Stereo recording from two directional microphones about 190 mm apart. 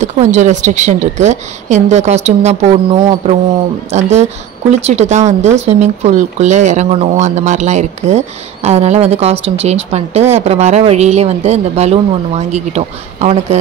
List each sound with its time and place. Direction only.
0.0 s a woman's voice: 40° right (ahead or behind)